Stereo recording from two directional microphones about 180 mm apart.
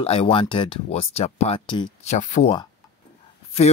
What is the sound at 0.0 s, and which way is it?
Speech, 35° left (ahead or behind).